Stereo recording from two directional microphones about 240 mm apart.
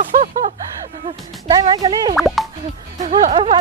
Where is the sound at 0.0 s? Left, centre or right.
Right.